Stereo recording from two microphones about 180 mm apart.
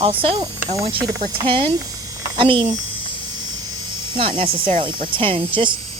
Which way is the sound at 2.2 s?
30° right (ahead or behind).